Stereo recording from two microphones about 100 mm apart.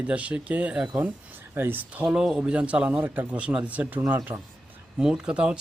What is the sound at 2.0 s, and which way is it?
Speech, 5° right (ahead or behind).